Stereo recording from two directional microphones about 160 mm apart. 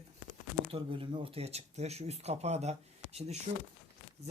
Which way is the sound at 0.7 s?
35° right (ahead or behind).